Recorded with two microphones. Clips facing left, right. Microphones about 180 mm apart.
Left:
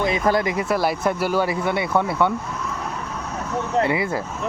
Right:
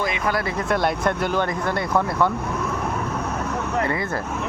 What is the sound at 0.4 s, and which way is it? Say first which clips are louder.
Speech: left 1 dB; 10° left (ahead or behind).